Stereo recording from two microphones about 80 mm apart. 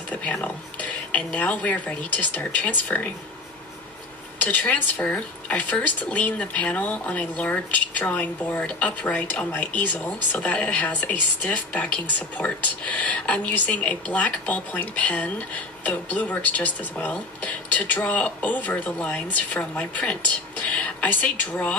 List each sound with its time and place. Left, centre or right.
0.1 s speech: centre
4.4 s speech: left